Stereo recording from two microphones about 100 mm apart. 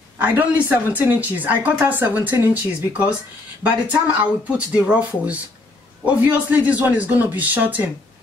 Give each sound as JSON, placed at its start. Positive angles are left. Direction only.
{"t": 0.2, "sound": "speech", "side_deg": -15}